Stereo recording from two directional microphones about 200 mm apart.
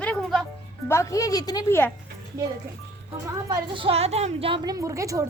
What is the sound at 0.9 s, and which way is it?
Speech, 15° left (ahead or behind).